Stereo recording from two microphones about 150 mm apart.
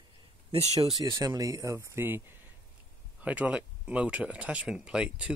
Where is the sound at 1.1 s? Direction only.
25° right (ahead or behind).